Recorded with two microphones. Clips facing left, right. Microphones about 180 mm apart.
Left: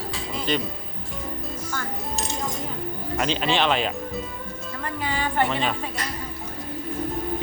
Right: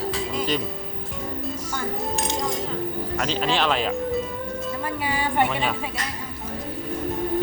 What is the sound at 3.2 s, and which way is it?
Speech, centre (ahead or behind).